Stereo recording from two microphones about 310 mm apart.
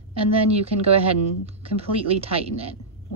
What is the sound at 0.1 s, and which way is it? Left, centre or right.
Speech, centre.